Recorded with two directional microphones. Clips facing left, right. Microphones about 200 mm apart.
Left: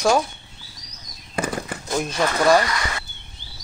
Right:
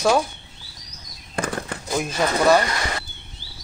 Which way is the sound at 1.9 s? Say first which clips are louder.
Even; 5° right (ahead or behind).